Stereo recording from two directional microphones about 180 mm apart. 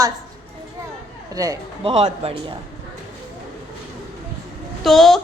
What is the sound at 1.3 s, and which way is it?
Speech, 20° right (ahead or behind).